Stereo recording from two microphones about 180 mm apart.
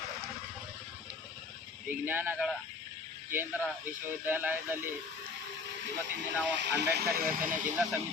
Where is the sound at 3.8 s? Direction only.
10° right (ahead or behind).